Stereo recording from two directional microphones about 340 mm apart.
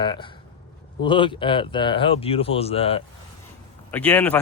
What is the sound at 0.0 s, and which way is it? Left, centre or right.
Speech, centre.